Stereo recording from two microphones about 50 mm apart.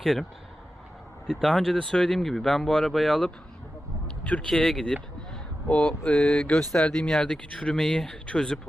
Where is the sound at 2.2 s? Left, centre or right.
Centre.